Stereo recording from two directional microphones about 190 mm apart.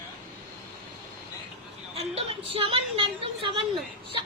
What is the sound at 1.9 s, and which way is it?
A woman's voice, 30° right (ahead or behind).